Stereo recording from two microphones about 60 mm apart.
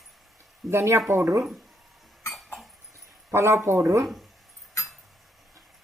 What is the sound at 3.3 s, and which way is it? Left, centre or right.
Speech, right.